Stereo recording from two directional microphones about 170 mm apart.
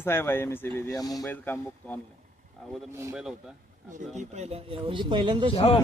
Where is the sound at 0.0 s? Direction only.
15° left (ahead or behind).